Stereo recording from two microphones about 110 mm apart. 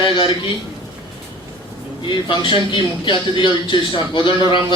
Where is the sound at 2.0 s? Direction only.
45° left (ahead or behind).